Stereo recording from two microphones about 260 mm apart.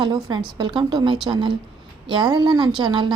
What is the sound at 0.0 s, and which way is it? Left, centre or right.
A woman's voice, centre.